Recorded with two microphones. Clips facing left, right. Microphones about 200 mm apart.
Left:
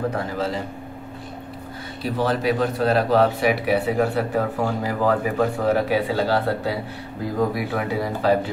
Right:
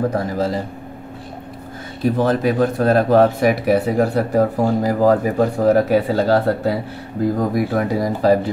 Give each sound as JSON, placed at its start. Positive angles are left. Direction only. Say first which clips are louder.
{"t": 0.1, "sound": "speech", "louder": "right 5 dB", "side_deg": -40}
{"t": 2.0, "sound": "speech", "louder": "right 5 dB", "side_deg": -45}